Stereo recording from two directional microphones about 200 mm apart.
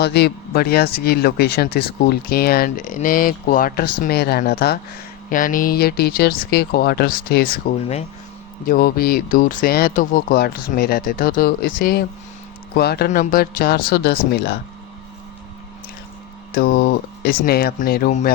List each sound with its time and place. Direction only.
0.0 s speech: 55° left (ahead or behind)
5.3 s speech: 40° left (ahead or behind)
7.8 s speech: 30° left (ahead or behind)
8.6 s speech: 45° left (ahead or behind)
16.5 s speech: 45° left (ahead or behind)